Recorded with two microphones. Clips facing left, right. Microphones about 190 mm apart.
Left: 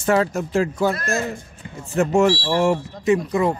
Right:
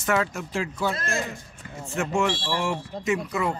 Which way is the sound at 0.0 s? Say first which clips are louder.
Left 6 dB; 35° left (ahead or behind).